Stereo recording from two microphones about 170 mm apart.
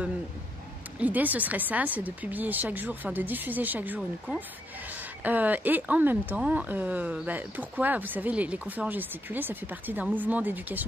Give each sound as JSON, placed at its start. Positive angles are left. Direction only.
{"t": 0.9, "sound": "speech", "side_deg": -10}